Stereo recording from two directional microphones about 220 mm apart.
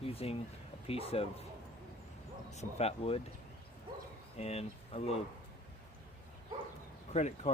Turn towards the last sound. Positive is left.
turn(degrees=30)  # may be behind; listen again after turning